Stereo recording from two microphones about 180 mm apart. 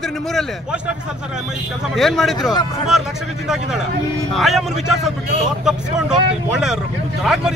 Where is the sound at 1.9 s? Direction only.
Centre (ahead or behind).